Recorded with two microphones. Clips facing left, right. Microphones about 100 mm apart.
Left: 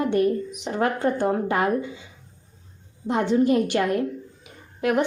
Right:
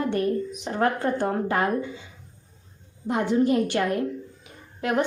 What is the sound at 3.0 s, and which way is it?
Speech, 25° left (ahead or behind).